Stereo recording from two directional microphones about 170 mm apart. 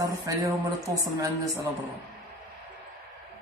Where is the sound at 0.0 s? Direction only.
20° right (ahead or behind).